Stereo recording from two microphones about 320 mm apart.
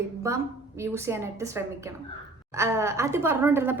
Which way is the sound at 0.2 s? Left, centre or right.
Centre.